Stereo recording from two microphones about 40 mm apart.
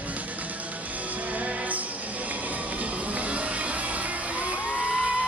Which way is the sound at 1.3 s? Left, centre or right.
Right.